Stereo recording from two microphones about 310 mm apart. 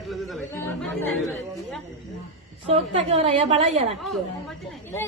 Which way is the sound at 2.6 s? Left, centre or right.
Centre.